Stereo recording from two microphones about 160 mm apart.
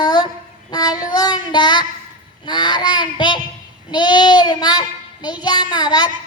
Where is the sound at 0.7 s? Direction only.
25° left (ahead or behind).